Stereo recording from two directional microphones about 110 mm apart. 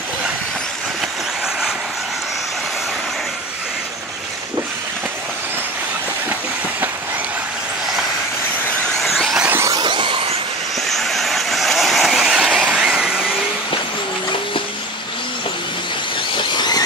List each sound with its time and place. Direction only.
9.0 s vehicle: centre (ahead or behind)
9.7 s a sound: 45° right (ahead or behind)
10.8 s vehicle: centre (ahead or behind)
16.3 s squeal: 40° left (ahead or behind)